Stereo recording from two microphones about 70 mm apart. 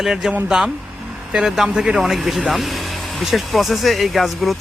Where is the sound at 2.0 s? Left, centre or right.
Centre.